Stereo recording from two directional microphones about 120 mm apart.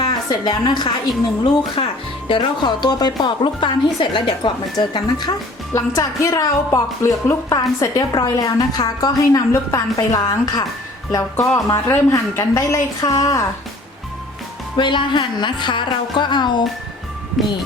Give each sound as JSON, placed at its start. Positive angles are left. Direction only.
{"t": 0.1, "sound": "a woman's voice", "side_deg": 35}
{"t": 1.8, "sound": "speech", "side_deg": 50}
{"t": 2.3, "sound": "a woman's voice", "side_deg": 35}
{"t": 5.7, "sound": "a woman's voice", "side_deg": 25}
{"t": 14.8, "sound": "a woman's voice", "side_deg": 40}
{"t": 17.4, "sound": "speech", "side_deg": 0}